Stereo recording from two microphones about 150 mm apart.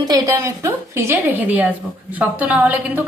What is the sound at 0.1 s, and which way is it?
A woman's voice, 20° right (ahead or behind).